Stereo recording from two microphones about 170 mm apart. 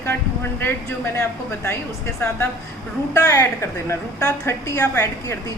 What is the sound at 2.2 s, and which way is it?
A woman's voice, 10° left (ahead or behind).